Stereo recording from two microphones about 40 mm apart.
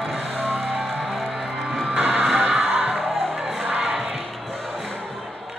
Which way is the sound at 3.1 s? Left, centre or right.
Centre.